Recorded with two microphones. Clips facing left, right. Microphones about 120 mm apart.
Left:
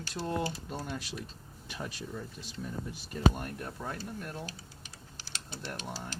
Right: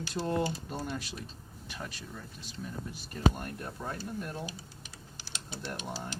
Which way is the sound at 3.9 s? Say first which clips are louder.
Right 2 dB; 20° right (ahead or behind).